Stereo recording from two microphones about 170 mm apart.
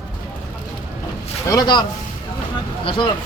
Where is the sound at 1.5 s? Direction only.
25° left (ahead or behind).